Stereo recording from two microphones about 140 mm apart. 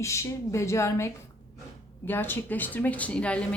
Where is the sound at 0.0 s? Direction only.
20° left (ahead or behind).